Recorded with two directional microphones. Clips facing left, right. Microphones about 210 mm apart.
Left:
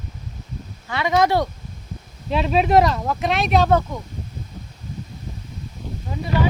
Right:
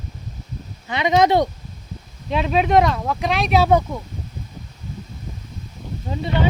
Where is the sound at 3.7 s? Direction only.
15° right (ahead or behind).